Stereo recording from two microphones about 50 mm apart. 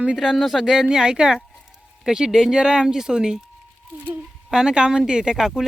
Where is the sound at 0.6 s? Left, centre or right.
Centre.